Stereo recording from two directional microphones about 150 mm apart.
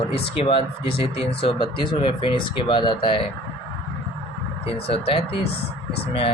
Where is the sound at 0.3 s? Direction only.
35° left (ahead or behind).